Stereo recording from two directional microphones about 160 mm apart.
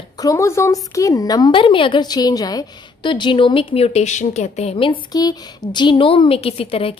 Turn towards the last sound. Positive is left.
turn(degrees=35)  # may be behind; listen again after turning